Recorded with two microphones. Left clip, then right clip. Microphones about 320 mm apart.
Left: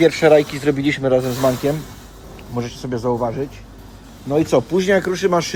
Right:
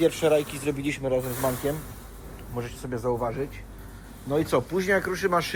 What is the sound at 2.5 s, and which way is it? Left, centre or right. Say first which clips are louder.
Speech: left 8 dB; left.